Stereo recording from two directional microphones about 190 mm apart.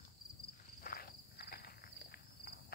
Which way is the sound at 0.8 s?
50° left (ahead or behind).